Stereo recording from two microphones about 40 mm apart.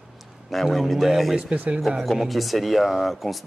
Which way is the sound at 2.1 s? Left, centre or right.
Centre.